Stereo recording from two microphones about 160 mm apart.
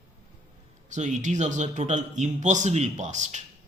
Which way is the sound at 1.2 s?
50° right (ahead or behind).